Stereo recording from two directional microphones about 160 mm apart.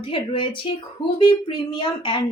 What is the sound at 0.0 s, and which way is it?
A woman's voice, 30° left (ahead or behind).